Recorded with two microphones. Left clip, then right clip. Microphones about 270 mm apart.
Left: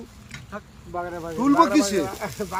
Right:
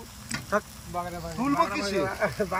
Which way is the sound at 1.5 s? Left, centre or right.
Left.